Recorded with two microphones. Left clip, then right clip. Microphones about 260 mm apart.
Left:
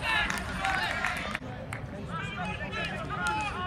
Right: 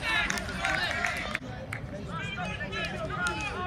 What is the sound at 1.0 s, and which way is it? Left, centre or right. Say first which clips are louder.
Music: right 1 dB; left.